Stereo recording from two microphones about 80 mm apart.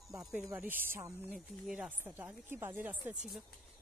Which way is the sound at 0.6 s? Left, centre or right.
Right.